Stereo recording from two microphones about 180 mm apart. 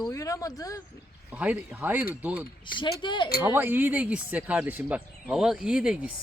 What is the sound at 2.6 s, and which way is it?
Speech, 25° left (ahead or behind).